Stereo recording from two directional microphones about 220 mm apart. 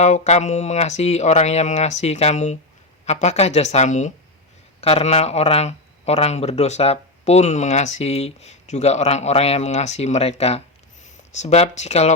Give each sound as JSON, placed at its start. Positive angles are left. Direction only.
{"t": 0.0, "sound": "speech", "side_deg": 30}